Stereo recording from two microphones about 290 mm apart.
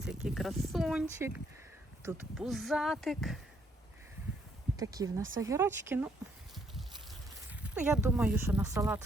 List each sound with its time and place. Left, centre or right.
0.0 s speech: centre
4.8 s speech: centre
5.2 s speech: right
5.5 s speech: centre
7.5 s speech: centre